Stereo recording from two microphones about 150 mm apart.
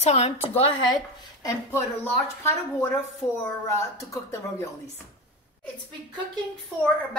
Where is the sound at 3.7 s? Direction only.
20° left (ahead or behind).